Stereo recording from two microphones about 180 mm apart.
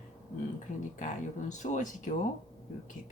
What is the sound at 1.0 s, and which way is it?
Speech, 40° left (ahead or behind).